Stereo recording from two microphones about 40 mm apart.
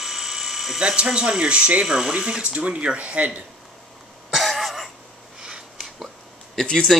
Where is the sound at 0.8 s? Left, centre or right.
Right.